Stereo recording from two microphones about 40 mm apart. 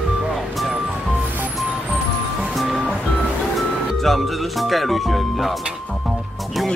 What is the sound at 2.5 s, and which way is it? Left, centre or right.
Music, centre.